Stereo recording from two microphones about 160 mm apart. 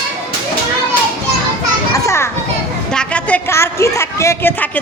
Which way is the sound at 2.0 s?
15° left (ahead or behind).